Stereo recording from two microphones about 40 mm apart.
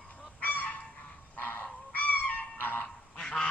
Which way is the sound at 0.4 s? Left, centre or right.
Left.